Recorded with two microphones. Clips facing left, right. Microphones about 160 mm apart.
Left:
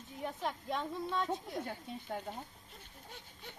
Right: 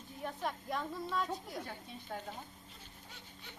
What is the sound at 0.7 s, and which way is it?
Speech, 25° left (ahead or behind).